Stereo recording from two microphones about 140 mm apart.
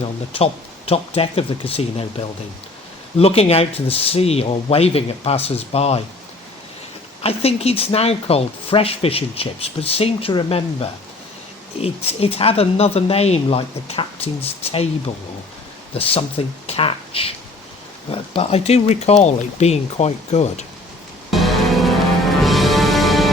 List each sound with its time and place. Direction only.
0.3 s speech: 45° left (ahead or behind)
3.2 s speech: 45° left (ahead or behind)
7.2 s speech: 45° left (ahead or behind)
16.6 s speech: 45° left (ahead or behind)
21.2 s music: centre (ahead or behind)